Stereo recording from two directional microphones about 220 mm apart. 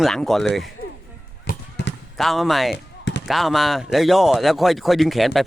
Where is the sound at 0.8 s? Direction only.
45° left (ahead or behind).